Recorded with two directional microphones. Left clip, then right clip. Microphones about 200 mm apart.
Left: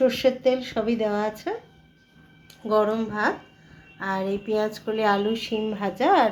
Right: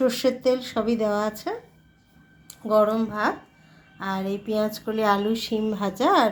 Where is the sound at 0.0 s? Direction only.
60° right (ahead or behind).